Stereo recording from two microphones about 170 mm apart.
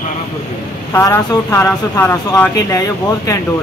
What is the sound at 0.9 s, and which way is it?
Speech, 15° left (ahead or behind).